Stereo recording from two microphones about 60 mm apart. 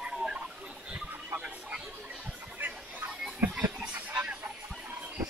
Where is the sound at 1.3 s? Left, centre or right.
Right.